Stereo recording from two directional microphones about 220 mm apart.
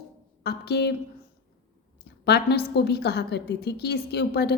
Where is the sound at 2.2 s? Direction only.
50° left (ahead or behind).